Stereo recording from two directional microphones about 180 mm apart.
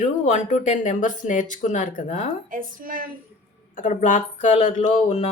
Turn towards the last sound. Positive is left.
turn(degrees=40)  # may be behind; listen again after turning